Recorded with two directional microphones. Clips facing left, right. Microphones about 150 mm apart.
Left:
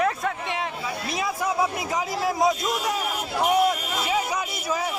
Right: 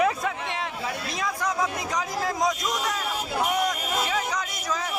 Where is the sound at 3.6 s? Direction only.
10° left (ahead or behind).